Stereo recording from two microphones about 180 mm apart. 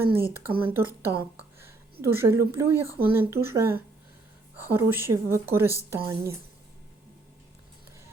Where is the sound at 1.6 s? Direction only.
15° right (ahead or behind).